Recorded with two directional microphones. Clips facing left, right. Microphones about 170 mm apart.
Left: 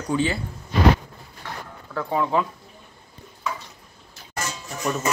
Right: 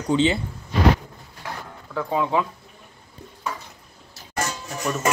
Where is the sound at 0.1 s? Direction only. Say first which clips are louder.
Right 4 dB; 20° right (ahead or behind).